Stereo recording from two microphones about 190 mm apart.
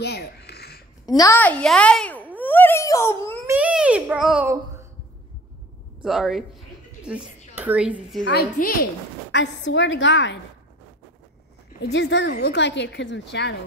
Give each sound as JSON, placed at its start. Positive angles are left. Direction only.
{"t": 0.0, "sound": "a sound", "side_deg": 60}
{"t": 1.0, "sound": "a woman's voice", "side_deg": 20}
{"t": 1.4, "sound": "speech", "side_deg": 5}
{"t": 2.3, "sound": "a sound", "side_deg": 10}
{"t": 3.4, "sound": "a child's voice", "side_deg": -5}
{"t": 6.0, "sound": "speech", "side_deg": 0}
{"t": 8.3, "sound": "a woman's voice", "side_deg": 50}
{"t": 9.3, "sound": "a woman's voice", "side_deg": 70}
{"t": 11.8, "sound": "a woman's voice", "side_deg": 65}
{"t": 12.3, "sound": "a woman's voice", "side_deg": 60}